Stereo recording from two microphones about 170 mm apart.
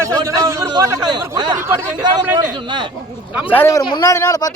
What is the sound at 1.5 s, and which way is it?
Speech, 15° right (ahead or behind).